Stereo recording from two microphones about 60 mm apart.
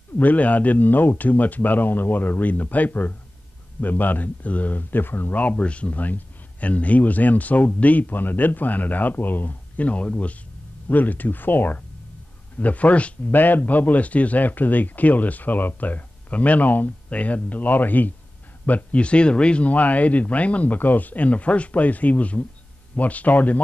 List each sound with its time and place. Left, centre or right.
0.2 s speech: left